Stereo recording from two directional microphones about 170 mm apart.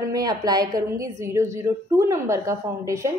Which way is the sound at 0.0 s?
20° right (ahead or behind).